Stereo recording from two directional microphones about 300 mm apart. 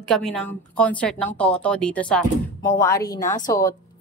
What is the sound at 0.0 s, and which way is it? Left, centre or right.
A woman's voice, centre.